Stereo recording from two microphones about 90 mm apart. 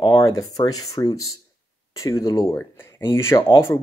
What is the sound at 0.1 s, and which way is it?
Speech, 40° left (ahead or behind).